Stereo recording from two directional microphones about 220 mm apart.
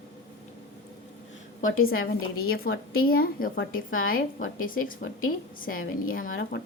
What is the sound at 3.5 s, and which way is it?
A woman's voice, 60° left (ahead or behind).